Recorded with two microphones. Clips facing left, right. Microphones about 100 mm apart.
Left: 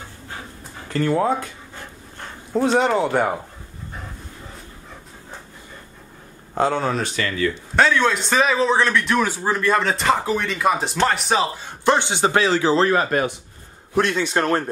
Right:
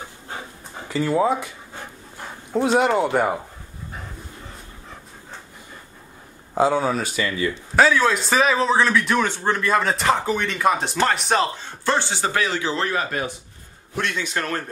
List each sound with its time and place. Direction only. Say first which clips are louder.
0.8 s a man's voice: even; 5° right (ahead or behind)
6.5 s speech: right 1 dB; 5° right (ahead or behind)
7.7 s a man's voice: right 1 dB; 5° right (ahead or behind)
11.6 s a man's voice: left 4 dB; 15° left (ahead or behind); by 14.6 s 30° left (ahead or behind)